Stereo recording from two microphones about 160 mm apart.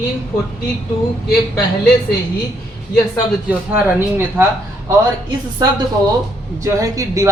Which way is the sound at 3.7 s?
15° right (ahead or behind).